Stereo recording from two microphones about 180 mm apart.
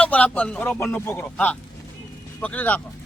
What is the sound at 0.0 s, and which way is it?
A man's voice, 5° left (ahead or behind).